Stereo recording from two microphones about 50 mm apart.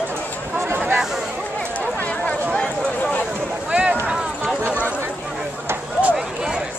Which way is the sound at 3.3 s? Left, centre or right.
Right.